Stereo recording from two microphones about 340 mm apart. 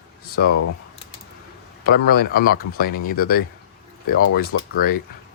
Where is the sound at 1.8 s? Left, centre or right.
Left.